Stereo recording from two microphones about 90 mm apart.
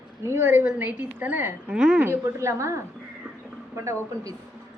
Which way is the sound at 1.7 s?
10° right (ahead or behind).